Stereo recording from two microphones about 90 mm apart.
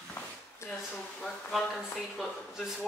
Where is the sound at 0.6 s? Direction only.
30° left (ahead or behind).